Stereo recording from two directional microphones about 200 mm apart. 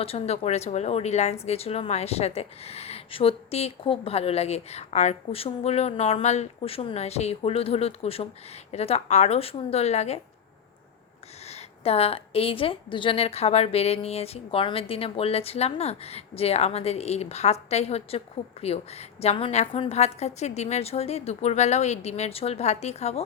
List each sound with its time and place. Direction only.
0.0 s speech: 30° left (ahead or behind)
11.4 s speech: 30° left (ahead or behind)